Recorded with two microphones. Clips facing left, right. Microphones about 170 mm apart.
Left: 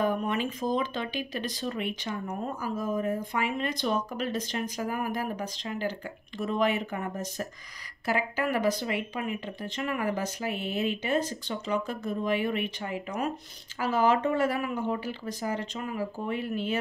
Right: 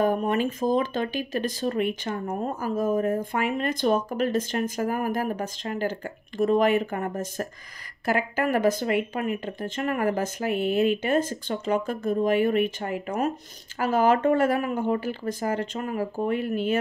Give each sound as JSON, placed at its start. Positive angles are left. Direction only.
{"t": 0.0, "sound": "speech", "side_deg": -45}